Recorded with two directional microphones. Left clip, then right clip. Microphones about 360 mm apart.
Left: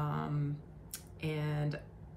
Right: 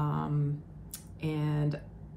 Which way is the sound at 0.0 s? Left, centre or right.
Centre.